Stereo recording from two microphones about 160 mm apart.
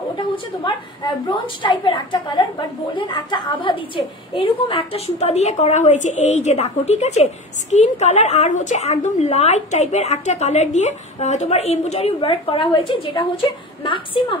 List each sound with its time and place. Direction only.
0.7 s a woman's voice: 30° left (ahead or behind)